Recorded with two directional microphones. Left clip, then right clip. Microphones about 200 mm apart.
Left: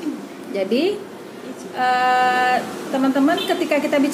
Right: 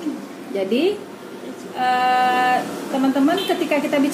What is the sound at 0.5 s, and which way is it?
A woman's voice, 15° left (ahead or behind).